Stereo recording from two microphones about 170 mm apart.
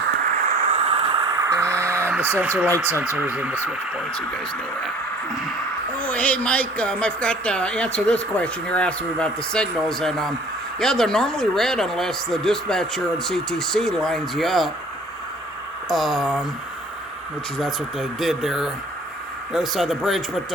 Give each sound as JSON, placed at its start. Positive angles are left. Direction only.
{"t": 0.4, "sound": "a sound", "side_deg": -40}
{"t": 6.0, "sound": "speech", "side_deg": 10}
{"t": 15.9, "sound": "speech", "side_deg": 0}
{"t": 17.6, "sound": "speech", "side_deg": 0}